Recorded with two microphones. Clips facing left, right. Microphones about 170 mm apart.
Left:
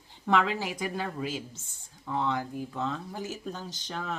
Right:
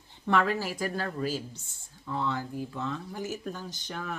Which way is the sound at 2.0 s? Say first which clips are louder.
Left 2 dB; 15° left (ahead or behind).